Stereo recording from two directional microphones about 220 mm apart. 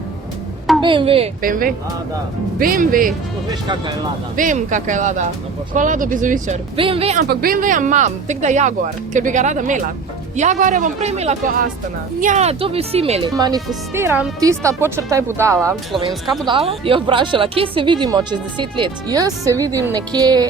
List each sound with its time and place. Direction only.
0.8 s speech: 20° right (ahead or behind)
1.4 s speech: 40° right (ahead or behind)
4.4 s speech: 35° right (ahead or behind)
6.7 s speech: 25° right (ahead or behind)
7.3 s speech: 40° right (ahead or behind); by 13.3 s 25° right (ahead or behind)
13.3 s speech: 15° right (ahead or behind)
16.5 s speech: 25° right (ahead or behind)